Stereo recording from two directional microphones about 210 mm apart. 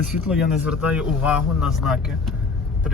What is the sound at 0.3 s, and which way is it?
A man's voice, 5° right (ahead or behind).